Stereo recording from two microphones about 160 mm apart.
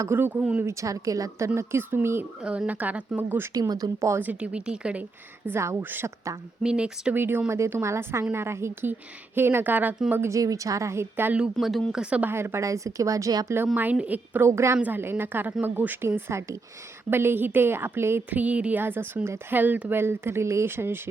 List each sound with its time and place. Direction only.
0.0 s speech: 15° right (ahead or behind)
11.5 s speech: centre (ahead or behind); by 21.0 s 15° right (ahead or behind)